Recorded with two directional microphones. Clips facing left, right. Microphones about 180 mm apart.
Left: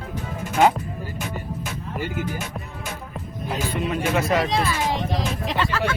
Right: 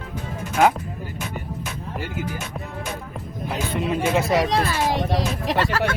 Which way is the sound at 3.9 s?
25° right (ahead or behind).